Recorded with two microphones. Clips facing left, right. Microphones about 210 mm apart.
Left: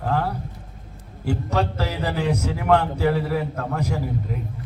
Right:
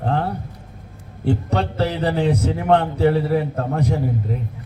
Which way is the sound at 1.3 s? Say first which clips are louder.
Right 2 dB; 35° right (ahead or behind).